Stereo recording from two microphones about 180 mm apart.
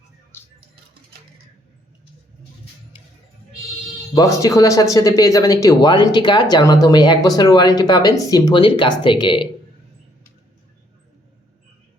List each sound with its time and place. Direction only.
4.1 s speech: 20° left (ahead or behind)